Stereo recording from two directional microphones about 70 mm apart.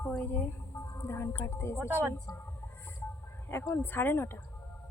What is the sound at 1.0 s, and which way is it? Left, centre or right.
Speech, left.